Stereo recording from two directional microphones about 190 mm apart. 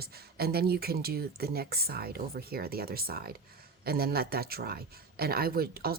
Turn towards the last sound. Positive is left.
turn(degrees=-50)  # may be behind; listen again after turning